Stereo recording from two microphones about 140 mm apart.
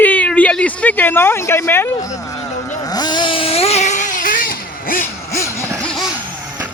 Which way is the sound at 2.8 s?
30° left (ahead or behind).